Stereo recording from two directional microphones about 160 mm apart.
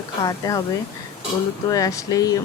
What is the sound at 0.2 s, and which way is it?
Speech, 25° left (ahead or behind).